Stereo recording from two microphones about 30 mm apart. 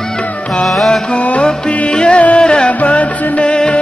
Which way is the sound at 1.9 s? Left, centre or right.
Left.